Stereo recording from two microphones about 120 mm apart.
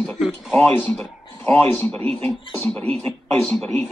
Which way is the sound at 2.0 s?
55° right (ahead or behind).